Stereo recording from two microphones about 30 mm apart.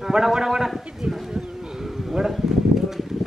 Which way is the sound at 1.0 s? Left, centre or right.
Right.